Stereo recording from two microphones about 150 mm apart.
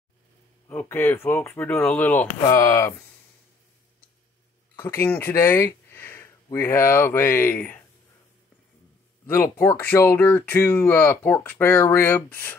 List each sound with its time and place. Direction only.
0.7 s speech: 15° left (ahead or behind)
2.4 s speech: 25° left (ahead or behind)
4.7 s speech: 15° left (ahead or behind)
9.2 s speech: 15° left (ahead or behind)